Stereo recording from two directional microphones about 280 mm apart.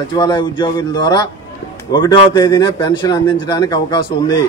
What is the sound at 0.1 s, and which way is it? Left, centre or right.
A man's voice, centre.